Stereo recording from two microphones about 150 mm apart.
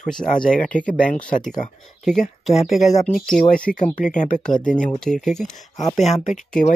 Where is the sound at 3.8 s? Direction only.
55° left (ahead or behind).